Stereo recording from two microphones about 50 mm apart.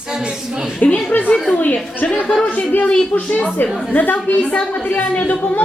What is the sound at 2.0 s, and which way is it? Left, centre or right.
Speech, left.